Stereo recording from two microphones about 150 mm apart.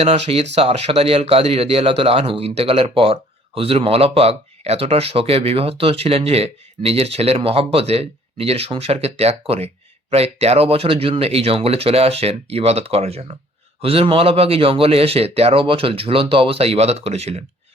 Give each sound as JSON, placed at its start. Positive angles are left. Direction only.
{"t": 0.0, "sound": "speech", "side_deg": -40}